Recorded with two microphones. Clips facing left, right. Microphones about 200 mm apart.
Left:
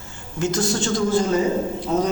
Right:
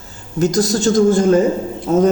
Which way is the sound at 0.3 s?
40° right (ahead or behind).